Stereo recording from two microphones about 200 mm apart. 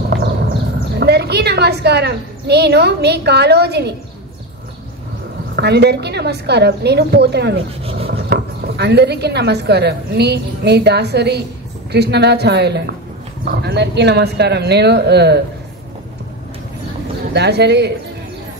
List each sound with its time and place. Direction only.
0.9 s a woman's voice: 55° right (ahead or behind)
5.6 s a woman's voice: 55° right (ahead or behind)
17.3 s a woman's voice: 55° right (ahead or behind)